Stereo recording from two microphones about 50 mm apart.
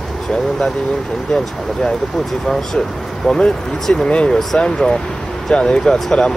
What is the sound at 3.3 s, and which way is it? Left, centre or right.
Speech, centre.